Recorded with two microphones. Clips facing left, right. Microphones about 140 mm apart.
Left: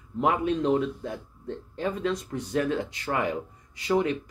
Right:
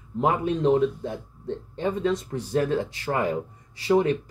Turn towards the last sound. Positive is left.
turn(degrees=-30)  # may be behind; listen again after turning